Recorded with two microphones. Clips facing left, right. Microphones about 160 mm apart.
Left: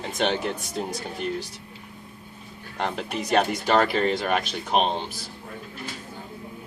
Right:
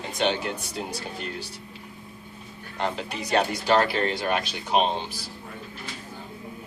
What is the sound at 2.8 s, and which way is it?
Speech, 55° left (ahead or behind).